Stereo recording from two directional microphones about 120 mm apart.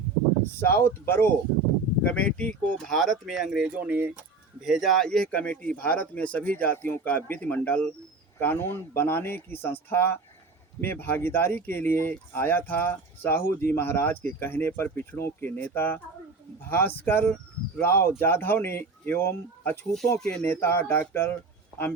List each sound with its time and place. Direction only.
0.5 s speech: 20° left (ahead or behind); by 4.2 s 15° right (ahead or behind)
4.6 s speech: centre (ahead or behind); by 19.8 s 20° left (ahead or behind)
19.9 s speech: 5° left (ahead or behind)
20.3 s speech: 15° left (ahead or behind)